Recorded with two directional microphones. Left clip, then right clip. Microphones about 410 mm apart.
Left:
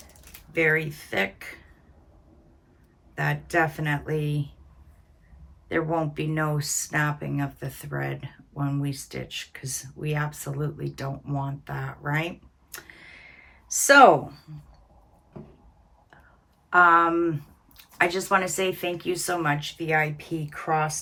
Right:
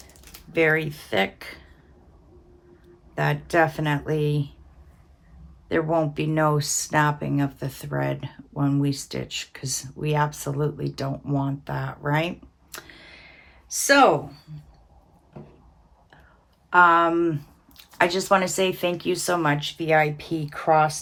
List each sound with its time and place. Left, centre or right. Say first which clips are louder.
0.5 s speech: right 2 dB; centre
3.2 s speech: right 3 dB; centre
5.6 s speech: right 3 dB; centre
12.7 s a sound: right 2 dB; centre
16.6 s speech: right 1 dB; centre